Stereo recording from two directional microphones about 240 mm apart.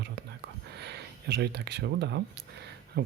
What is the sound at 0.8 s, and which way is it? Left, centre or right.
Speech, right.